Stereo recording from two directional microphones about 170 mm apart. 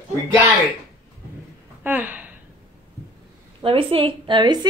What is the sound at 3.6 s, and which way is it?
A woman's voice, 35° right (ahead or behind).